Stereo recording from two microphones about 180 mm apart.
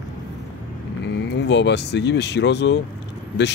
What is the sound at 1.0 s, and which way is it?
Speech, 75° left (ahead or behind).